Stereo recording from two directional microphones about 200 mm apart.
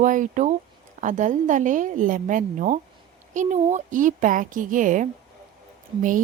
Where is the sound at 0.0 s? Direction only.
40° right (ahead or behind).